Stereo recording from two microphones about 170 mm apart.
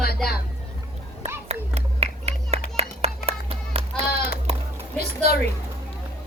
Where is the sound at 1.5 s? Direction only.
40° right (ahead or behind).